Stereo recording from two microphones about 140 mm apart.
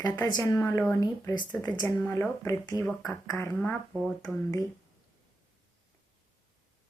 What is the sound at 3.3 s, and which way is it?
Speech, 20° left (ahead or behind).